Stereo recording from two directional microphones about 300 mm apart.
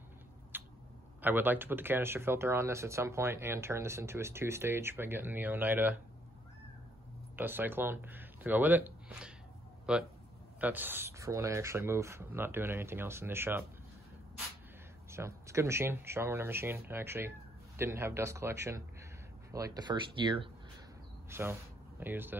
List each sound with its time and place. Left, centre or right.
0.5 s a sound: centre
1.2 s speech: centre
7.3 s speech: centre
15.0 s speech: centre